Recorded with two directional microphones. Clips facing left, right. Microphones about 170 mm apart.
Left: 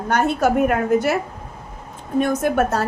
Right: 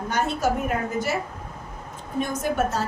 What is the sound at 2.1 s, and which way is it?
Speech, 60° left (ahead or behind).